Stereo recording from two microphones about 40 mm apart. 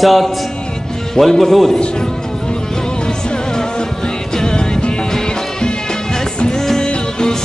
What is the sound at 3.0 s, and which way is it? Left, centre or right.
Music, centre.